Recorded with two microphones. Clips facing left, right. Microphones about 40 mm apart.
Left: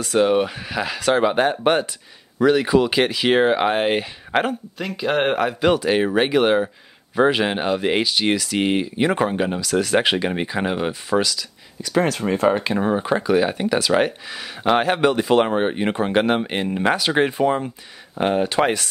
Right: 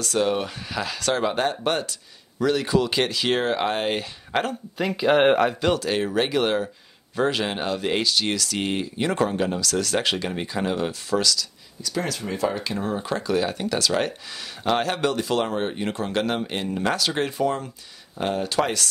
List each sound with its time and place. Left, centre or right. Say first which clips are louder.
0.0 s speech: left 6 dB; centre
4.7 s speech: right 4 dB; centre
5.6 s speech: left 5 dB; centre
11.8 s speech: left 8 dB; left